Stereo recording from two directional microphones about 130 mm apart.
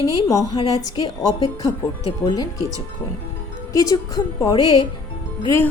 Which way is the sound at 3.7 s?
25° left (ahead or behind).